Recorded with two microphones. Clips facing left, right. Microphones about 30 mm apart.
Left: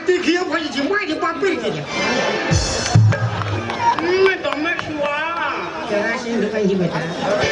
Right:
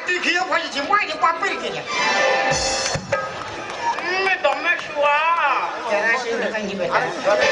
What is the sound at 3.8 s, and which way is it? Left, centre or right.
Run, left.